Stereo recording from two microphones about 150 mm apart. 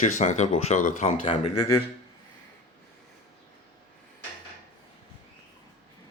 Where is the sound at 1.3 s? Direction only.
45° left (ahead or behind).